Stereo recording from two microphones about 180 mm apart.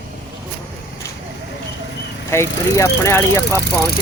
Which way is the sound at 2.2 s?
15° left (ahead or behind).